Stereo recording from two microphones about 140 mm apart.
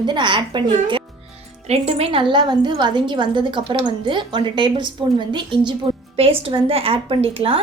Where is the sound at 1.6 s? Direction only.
45° right (ahead or behind).